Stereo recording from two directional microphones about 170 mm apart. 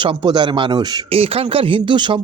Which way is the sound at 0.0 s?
25° right (ahead or behind).